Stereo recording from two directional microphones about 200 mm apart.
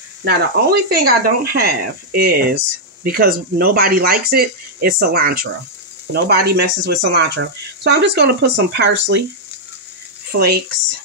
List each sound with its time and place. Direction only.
0.2 s a woman's voice: 55° right (ahead or behind)
10.3 s speech: 50° right (ahead or behind)